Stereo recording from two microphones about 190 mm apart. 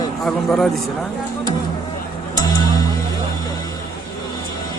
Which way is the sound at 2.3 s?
20° left (ahead or behind).